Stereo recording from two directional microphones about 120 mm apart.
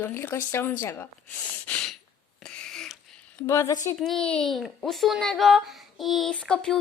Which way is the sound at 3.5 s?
25° left (ahead or behind).